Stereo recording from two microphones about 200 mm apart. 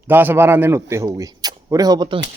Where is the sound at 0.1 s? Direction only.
10° right (ahead or behind).